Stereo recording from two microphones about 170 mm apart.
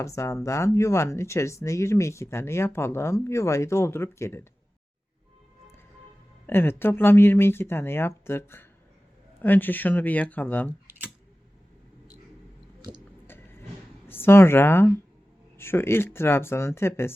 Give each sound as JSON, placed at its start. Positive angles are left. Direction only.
{"t": 0.0, "sound": "speech", "side_deg": 15}
{"t": 6.5, "sound": "speech", "side_deg": 15}
{"t": 13.2, "sound": "a sound", "side_deg": 10}
{"t": 14.1, "sound": "speech", "side_deg": 15}